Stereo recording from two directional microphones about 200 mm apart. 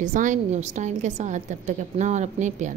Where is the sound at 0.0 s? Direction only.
40° right (ahead or behind).